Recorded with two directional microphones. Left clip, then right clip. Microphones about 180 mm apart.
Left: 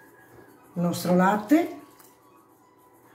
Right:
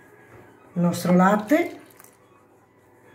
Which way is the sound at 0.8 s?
20° right (ahead or behind).